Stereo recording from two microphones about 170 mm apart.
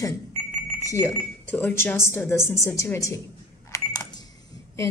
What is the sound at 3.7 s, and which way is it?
Cash register, 20° left (ahead or behind).